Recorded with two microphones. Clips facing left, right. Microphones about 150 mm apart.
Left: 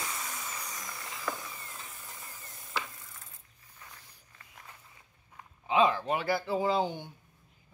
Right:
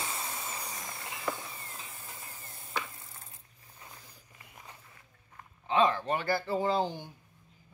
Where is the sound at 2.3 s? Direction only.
30° right (ahead or behind).